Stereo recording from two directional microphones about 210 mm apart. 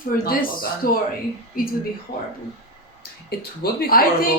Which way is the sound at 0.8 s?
45° left (ahead or behind).